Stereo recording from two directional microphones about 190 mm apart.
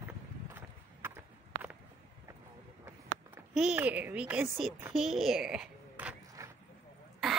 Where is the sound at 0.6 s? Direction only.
10° right (ahead or behind).